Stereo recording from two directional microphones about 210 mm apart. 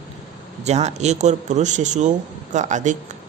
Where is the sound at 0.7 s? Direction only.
30° right (ahead or behind).